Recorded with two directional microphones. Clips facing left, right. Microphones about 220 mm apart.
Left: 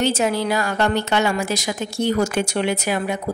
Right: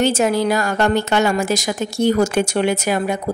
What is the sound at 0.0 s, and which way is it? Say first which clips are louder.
A woman's voice: right 3 dB; 50° right (ahead or behind).